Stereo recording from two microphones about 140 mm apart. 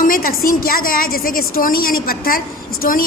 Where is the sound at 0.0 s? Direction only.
90° left.